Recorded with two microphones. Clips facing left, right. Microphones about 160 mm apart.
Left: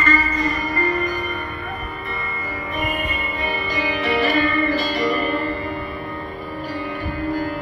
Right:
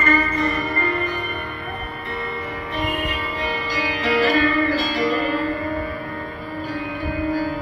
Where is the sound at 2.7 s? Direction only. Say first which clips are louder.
Right 1 dB; 80° right.